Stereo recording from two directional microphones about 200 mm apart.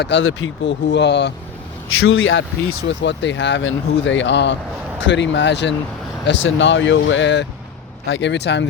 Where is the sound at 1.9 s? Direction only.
85° left.